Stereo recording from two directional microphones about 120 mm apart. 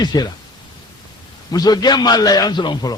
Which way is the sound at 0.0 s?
35° left (ahead or behind).